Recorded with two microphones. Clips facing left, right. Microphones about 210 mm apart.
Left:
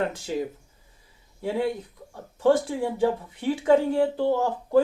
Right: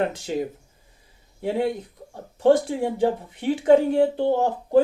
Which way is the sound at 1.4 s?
20° right (ahead or behind).